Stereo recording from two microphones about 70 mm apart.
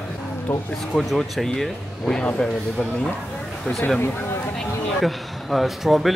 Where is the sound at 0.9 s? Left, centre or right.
Centre.